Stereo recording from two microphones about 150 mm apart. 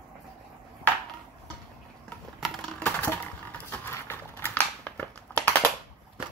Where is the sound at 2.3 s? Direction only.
Centre (ahead or behind).